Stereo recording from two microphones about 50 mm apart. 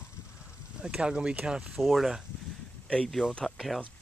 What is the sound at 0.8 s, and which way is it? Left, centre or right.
Speech, centre.